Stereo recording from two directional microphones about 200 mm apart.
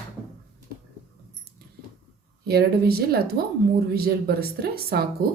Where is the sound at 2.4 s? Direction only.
50° right (ahead or behind).